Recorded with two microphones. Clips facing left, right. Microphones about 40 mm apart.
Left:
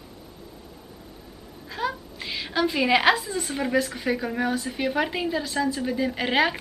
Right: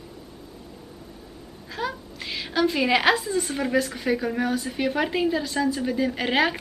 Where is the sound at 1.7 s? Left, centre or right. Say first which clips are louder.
Left 1 dB; centre.